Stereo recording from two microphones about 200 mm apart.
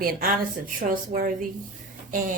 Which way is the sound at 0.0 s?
50° right (ahead or behind).